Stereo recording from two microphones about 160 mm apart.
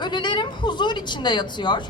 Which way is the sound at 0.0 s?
30° left (ahead or behind).